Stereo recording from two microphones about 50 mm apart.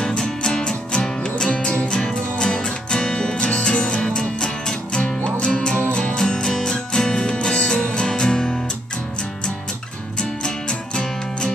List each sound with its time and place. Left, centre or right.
0.0 s music: centre
1.9 s music: centre
10.4 s music: centre